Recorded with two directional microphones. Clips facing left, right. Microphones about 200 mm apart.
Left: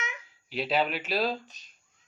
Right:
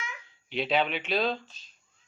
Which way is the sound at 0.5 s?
5° left (ahead or behind).